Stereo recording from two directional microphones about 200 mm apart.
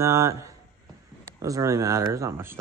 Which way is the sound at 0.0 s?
15° right (ahead or behind).